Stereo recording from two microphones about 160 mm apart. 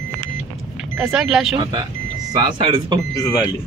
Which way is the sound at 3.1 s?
20° left (ahead or behind).